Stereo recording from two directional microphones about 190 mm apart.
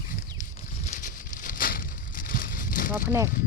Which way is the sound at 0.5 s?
40° left (ahead or behind).